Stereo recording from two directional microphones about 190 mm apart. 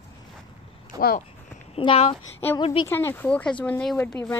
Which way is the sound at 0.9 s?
20° right (ahead or behind).